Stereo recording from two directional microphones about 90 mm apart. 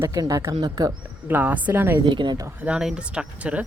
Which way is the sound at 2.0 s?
60° right (ahead or behind).